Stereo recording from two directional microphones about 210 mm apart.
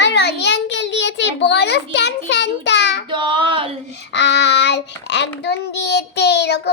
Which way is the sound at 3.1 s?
25° right (ahead or behind).